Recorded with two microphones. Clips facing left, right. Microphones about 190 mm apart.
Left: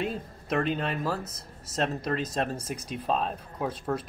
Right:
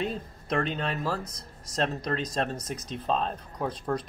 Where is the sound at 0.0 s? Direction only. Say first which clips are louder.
Even; 5° left (ahead or behind).